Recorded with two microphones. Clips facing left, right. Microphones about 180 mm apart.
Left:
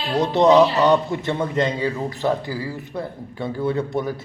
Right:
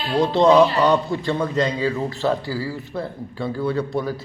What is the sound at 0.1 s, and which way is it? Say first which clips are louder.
A man's voice: even; 20° left (ahead or behind).